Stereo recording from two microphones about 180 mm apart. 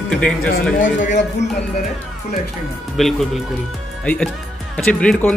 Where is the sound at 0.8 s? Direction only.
45° left (ahead or behind).